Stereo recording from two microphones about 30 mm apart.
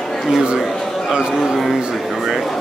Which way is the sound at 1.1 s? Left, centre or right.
Right.